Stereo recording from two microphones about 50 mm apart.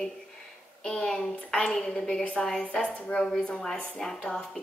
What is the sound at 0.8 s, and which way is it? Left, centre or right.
Speech, centre.